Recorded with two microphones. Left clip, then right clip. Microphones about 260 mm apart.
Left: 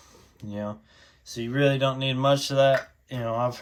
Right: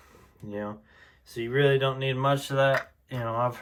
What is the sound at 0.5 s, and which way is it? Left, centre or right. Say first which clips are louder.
Speech: left 1 dB; centre.